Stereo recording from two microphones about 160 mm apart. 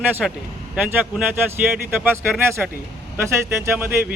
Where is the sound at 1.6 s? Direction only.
10° right (ahead or behind).